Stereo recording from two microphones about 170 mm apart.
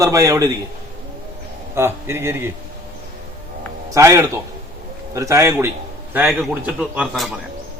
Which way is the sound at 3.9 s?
15° right (ahead or behind).